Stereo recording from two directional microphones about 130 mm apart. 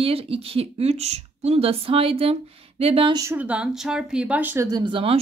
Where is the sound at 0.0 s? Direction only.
45° right (ahead or behind).